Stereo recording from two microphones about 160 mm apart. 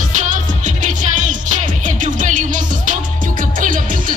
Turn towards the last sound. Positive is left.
turn(degrees=-55)  # may be behind; listen again after turning